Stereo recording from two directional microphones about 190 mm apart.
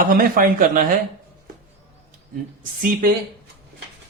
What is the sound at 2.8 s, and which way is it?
Speech, 50° right (ahead or behind).